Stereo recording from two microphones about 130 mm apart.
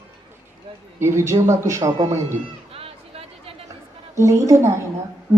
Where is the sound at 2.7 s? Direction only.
45° right (ahead or behind).